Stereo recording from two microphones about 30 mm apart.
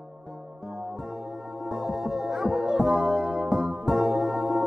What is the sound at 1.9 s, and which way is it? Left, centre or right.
Music, centre.